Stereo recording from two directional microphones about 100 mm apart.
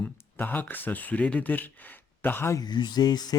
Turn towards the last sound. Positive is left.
turn(degrees=40)  # may be behind; listen again after turning